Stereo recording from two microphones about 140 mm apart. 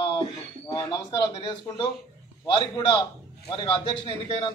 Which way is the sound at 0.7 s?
30° left (ahead or behind).